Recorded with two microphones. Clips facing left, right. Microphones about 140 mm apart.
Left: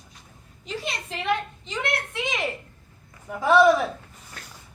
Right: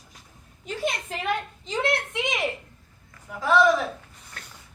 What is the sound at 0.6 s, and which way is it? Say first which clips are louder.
A woman's voice: right 4 dB; 50° right (ahead or behind).